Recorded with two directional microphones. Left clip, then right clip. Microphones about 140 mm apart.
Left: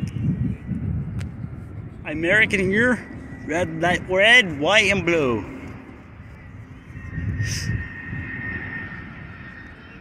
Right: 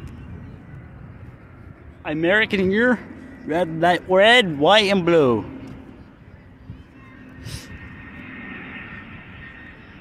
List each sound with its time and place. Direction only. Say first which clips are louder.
2.0 s speech: even; 35° right (ahead or behind)
4.1 s a man's voice: even; 45° right (ahead or behind)
8.1 s vehicle: left 5 dB; 60° right (ahead or behind)